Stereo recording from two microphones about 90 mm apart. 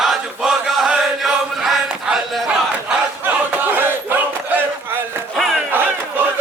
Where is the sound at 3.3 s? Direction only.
20° right (ahead or behind).